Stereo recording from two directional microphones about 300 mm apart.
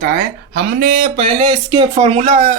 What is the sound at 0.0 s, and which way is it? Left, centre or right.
Speech, right.